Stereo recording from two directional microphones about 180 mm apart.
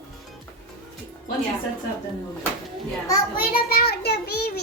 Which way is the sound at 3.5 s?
60° left (ahead or behind).